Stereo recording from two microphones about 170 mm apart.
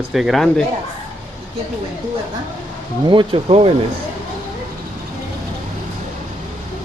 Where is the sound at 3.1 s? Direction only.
30° right (ahead or behind).